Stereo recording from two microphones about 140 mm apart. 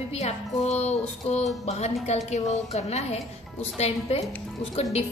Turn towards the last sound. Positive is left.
turn(degrees=50)  # may be behind; listen again after turning